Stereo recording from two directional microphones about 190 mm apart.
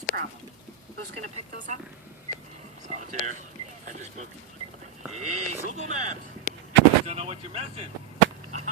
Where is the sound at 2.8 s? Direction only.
40° right (ahead or behind).